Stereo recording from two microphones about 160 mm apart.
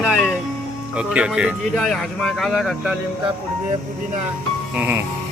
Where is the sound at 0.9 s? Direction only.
5° right (ahead or behind).